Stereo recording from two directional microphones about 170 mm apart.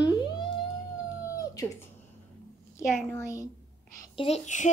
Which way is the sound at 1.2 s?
20° left (ahead or behind).